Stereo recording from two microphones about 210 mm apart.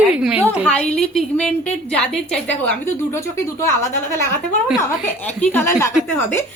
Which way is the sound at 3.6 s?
10° left (ahead or behind).